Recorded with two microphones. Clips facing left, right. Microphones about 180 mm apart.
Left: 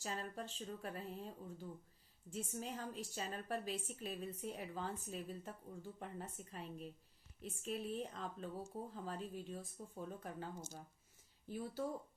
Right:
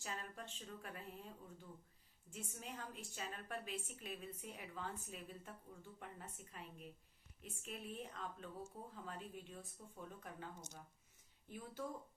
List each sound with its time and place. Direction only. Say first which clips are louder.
0.0 s a woman's voice: left 5 dB; 35° left (ahead or behind)